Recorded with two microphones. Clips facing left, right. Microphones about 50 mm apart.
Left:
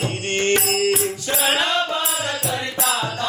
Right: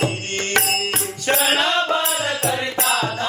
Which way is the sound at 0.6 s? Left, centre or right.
Right.